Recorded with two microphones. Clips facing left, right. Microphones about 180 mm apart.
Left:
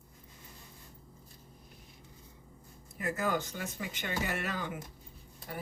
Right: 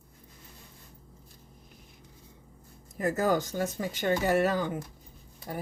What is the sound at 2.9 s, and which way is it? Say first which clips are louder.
Speech: right 6 dB; 40° right (ahead or behind).